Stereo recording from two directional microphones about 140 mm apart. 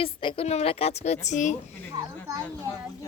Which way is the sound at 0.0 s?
40° left (ahead or behind).